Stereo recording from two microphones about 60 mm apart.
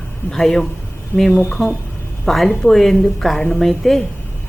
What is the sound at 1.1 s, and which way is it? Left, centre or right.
Speech, right.